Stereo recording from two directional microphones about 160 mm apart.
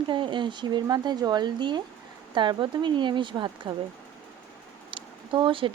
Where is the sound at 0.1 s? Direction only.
30° right (ahead or behind).